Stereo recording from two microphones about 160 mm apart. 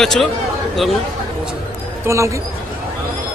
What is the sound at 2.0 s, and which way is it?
Speech, 20° right (ahead or behind).